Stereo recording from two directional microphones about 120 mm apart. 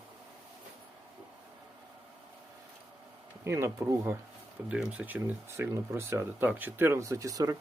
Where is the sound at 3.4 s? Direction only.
25° right (ahead or behind).